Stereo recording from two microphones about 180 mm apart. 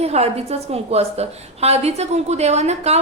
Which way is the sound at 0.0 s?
35° right (ahead or behind).